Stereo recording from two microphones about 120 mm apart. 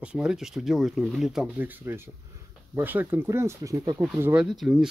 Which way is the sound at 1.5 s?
15° right (ahead or behind).